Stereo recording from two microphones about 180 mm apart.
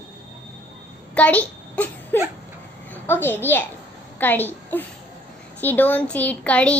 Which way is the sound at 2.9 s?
10° left (ahead or behind).